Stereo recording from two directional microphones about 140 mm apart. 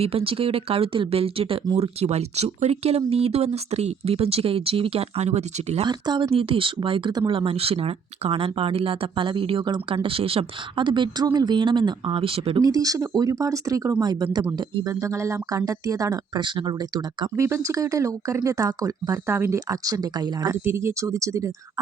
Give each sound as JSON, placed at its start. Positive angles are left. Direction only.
{"t": 0.0, "sound": "speech", "side_deg": -45}
{"t": 5.8, "sound": "speech", "side_deg": -35}
{"t": 12.6, "sound": "speech", "side_deg": -25}